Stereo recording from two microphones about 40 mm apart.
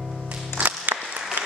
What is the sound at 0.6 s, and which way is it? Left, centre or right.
Music, right.